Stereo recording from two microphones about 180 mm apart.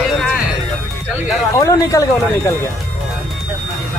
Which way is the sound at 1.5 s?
20° left (ahead or behind).